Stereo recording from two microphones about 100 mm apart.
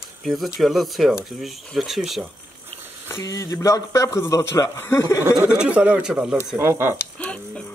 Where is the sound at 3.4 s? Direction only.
30° left (ahead or behind).